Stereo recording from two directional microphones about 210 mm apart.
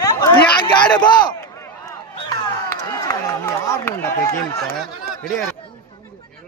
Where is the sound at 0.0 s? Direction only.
20° left (ahead or behind).